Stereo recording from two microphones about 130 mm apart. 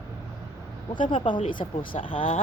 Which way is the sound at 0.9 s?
40° left (ahead or behind).